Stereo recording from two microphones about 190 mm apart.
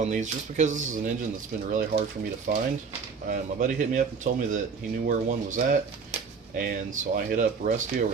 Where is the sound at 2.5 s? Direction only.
50° right (ahead or behind).